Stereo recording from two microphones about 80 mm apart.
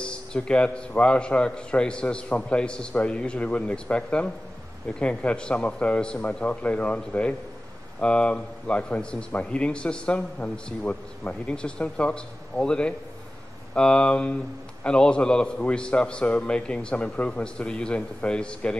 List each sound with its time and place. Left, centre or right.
0.0 s speech: centre